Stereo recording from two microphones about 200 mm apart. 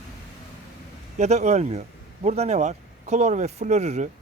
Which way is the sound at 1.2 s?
35° right (ahead or behind).